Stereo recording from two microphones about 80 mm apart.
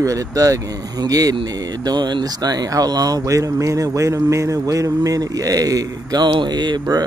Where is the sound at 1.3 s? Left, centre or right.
Right.